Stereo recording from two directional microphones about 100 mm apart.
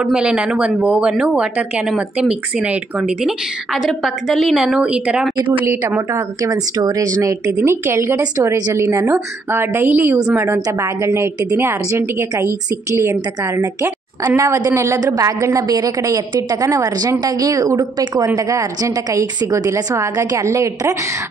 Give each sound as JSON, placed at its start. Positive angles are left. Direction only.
{"t": 0.0, "sound": "speech", "side_deg": -10}
{"t": 5.6, "sound": "a woman's voice", "side_deg": -25}
{"t": 14.2, "sound": "a woman's voice", "side_deg": -30}